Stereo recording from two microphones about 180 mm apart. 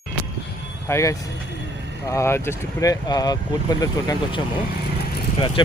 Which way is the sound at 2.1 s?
15° left (ahead or behind).